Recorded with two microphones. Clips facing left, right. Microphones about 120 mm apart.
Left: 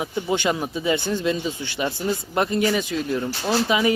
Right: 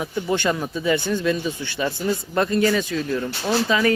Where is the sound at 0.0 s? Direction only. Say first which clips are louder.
Even; 20° left (ahead or behind).